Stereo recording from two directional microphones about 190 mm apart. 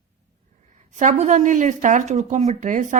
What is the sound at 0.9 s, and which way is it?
A woman's voice, 40° right (ahead or behind).